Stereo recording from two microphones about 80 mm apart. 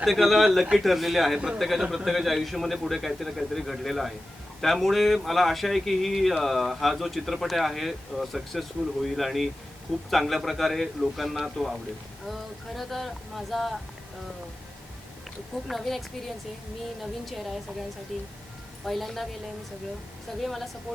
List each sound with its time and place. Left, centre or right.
0.0 s speech: centre
15.6 s speech: centre
20.4 s speech: centre